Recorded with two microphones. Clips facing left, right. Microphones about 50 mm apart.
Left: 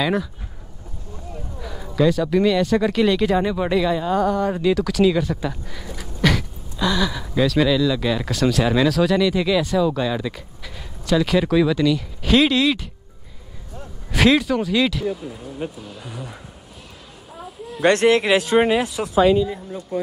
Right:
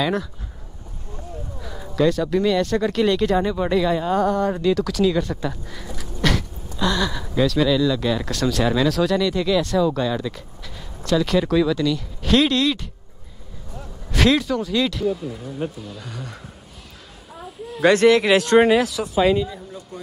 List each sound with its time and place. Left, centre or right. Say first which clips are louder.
1.6 s speech: left 1 dB; centre
14.1 s speech: left 2 dB; centre
17.8 s speech: right 1 dB; left
18.2 s speech: right 2 dB; centre
19.0 s speech: left 1 dB; left